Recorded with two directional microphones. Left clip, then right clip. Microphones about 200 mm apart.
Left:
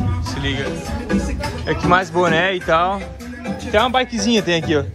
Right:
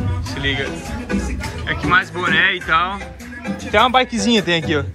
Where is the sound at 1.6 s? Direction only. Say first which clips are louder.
Even; 30° left (ahead or behind).